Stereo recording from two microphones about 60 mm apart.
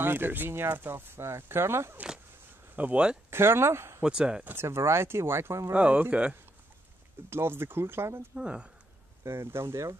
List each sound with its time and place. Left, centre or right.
0.0 s speech: right
2.7 s speech: right
3.3 s speech: right
4.0 s speech: centre
4.6 s speech: right
5.7 s speech: right
7.2 s speech: right
8.4 s speech: centre
9.2 s speech: right